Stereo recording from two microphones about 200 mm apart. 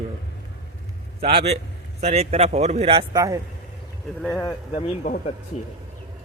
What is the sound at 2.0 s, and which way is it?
Speech, 30° right (ahead or behind).